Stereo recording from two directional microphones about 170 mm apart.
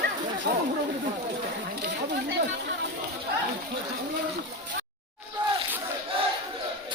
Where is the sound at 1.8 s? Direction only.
90° right.